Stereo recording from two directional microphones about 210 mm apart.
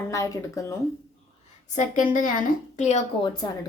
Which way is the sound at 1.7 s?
35° left (ahead or behind).